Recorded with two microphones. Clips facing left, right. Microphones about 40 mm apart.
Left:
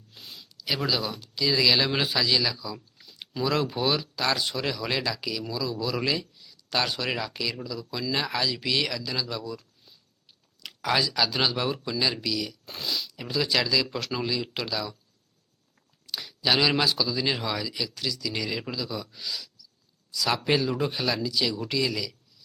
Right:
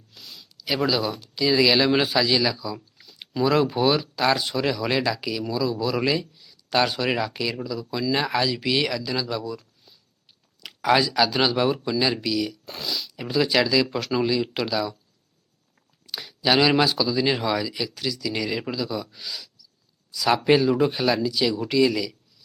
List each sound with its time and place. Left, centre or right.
0.1 s a sound: left
0.5 s speech: centre
10.8 s speech: centre
12.6 s speech: centre
13.1 s speech: centre
16.0 s speech: centre